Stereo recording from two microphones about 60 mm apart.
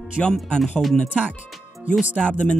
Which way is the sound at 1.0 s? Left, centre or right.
Centre.